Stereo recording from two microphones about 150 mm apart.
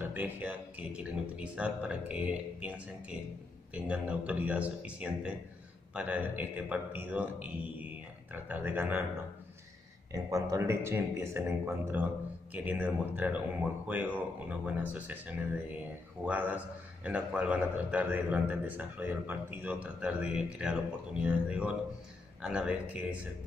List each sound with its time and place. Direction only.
0.0 s a man's voice: 10° right (ahead or behind)
3.7 s a man's voice: 10° right (ahead or behind)
10.1 s a man's voice: 20° right (ahead or behind); by 22.8 s 5° right (ahead or behind)